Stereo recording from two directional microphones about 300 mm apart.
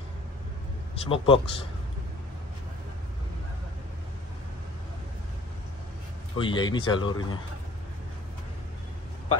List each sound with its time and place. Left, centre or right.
0.9 s speech: centre
6.3 s speech: centre